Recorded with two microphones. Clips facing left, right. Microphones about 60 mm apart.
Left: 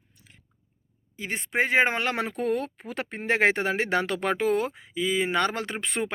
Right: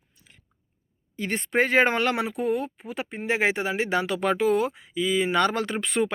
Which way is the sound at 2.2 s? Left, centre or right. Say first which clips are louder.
Right 1 dB; left.